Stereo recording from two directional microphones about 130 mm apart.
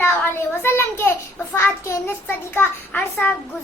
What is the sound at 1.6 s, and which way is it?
Child singing, 20° left (ahead or behind).